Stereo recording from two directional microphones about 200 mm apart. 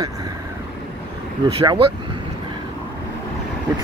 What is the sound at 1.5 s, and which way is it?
Speech, 25° right (ahead or behind).